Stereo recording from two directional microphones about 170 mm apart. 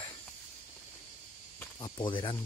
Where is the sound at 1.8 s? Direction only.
30° left (ahead or behind).